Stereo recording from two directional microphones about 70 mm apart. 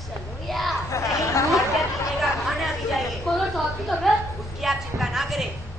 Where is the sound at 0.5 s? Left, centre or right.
Centre.